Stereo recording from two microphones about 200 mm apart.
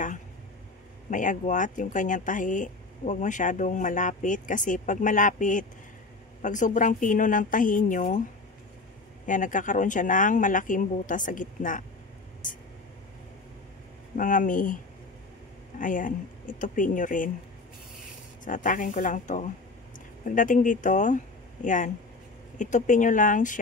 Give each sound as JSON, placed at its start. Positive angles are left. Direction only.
{"t": 1.1, "sound": "speech", "side_deg": 40}
{"t": 9.2, "sound": "speech", "side_deg": 40}
{"t": 14.1, "sound": "speech", "side_deg": 40}
{"t": 15.8, "sound": "speech", "side_deg": 40}
{"t": 18.4, "sound": "speech", "side_deg": 40}